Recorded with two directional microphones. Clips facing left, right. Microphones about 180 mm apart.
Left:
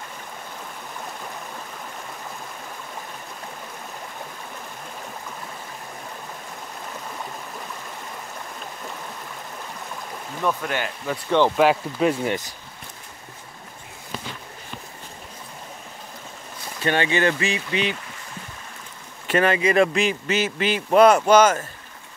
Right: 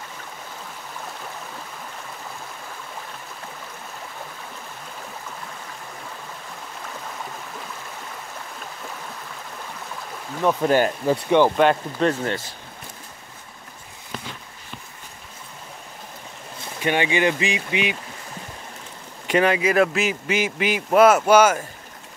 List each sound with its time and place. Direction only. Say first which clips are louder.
10.6 s speech: right 9 dB; 35° right (ahead or behind)
11.2 s speech: right 1 dB; 15° right (ahead or behind)
11.5 s speech: even; 5° left (ahead or behind)
16.8 s speech: even; 15° right (ahead or behind)
19.2 s speech: right 1 dB; 15° right (ahead or behind)